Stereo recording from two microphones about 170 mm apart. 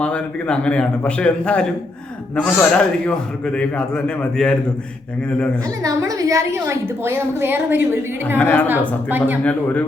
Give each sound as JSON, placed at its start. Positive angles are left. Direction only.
{"t": 0.0, "sound": "a man's voice", "side_deg": 5}
{"t": 5.6, "sound": "a woman's voice", "side_deg": -20}
{"t": 8.4, "sound": "a man's voice", "side_deg": 10}
{"t": 9.0, "sound": "a woman's voice", "side_deg": -10}
{"t": 9.4, "sound": "a man's voice", "side_deg": 10}